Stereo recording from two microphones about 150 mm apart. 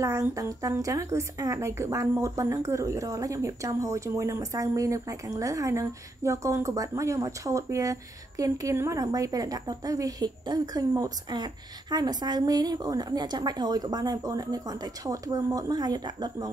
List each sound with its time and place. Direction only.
0.0 s a woman's voice: 20° right (ahead or behind)